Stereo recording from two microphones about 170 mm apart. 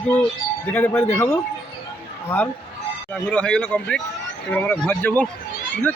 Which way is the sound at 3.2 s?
5° left (ahead or behind).